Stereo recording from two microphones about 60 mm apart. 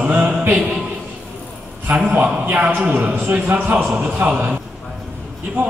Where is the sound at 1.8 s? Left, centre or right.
Right.